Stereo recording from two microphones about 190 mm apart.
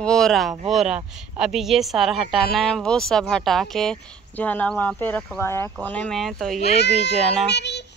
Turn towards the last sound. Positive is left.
turn(degrees=65)  # may be behind; listen again after turning